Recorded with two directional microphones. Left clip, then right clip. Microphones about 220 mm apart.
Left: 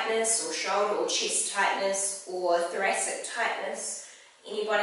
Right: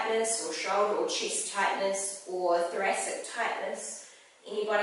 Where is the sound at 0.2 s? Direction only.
10° right (ahead or behind).